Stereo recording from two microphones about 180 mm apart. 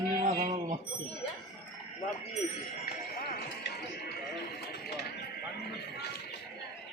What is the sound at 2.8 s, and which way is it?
Run, 60° left (ahead or behind).